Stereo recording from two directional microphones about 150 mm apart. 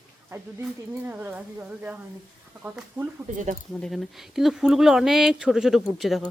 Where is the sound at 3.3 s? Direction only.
55° right (ahead or behind).